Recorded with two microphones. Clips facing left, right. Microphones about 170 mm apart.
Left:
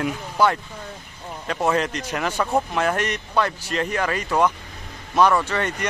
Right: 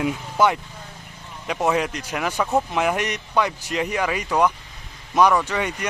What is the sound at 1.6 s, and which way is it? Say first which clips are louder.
Speech: even; 5° right (ahead or behind).